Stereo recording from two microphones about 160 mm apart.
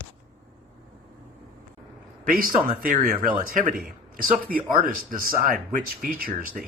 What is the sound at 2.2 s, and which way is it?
Speech, 60° right (ahead or behind).